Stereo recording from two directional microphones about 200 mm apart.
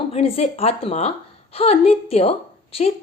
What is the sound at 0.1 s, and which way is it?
A woman's voice, 30° left (ahead or behind).